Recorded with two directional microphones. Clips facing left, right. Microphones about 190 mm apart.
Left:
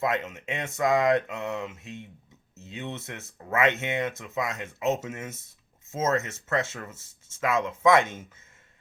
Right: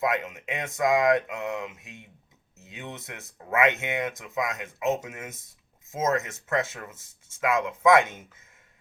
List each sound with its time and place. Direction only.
0.0 s speech: 10° right (ahead or behind)